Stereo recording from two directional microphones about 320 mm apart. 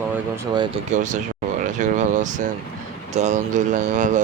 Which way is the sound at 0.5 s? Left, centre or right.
Centre.